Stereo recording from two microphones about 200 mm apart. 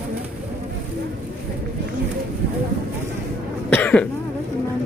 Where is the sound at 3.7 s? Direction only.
5° left (ahead or behind).